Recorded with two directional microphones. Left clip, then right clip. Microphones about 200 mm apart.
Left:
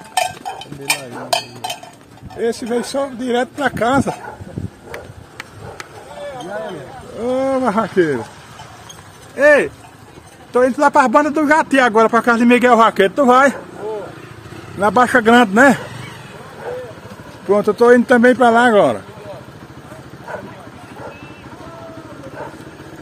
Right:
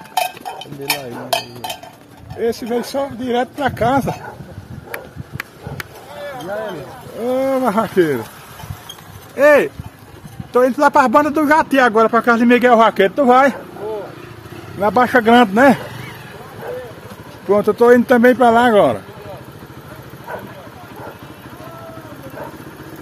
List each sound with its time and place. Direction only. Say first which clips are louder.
0.1 s a sound: left 1 dB; 5° right (ahead or behind)
2.3 s speech: even; 5° left (ahead or behind)
4.9 s a sound: right 4 dB; 30° right (ahead or behind)
7.2 s speech: even; 5° left (ahead or behind)
9.3 s speech: even; 10° right (ahead or behind)
10.5 s speech: even; centre (ahead or behind); by 13.6 s 15° left (ahead or behind)
14.8 s speech: left 1 dB; 20° left (ahead or behind)
17.5 s speech: even; centre (ahead or behind)